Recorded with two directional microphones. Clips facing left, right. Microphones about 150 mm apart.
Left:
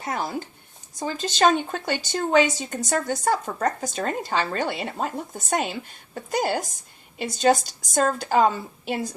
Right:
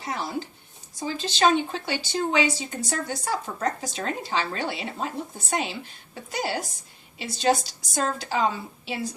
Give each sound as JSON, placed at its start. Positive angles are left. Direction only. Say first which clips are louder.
{"t": 0.0, "sound": "speech", "louder": "left 2 dB", "side_deg": 50}